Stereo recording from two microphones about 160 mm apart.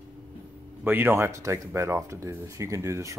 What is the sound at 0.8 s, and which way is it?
Speech, 10° right (ahead or behind).